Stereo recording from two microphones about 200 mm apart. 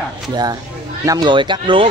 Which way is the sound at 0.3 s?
20° right (ahead or behind).